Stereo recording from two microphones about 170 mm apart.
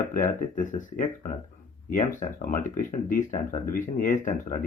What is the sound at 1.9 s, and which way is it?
Speech, 50° left (ahead or behind).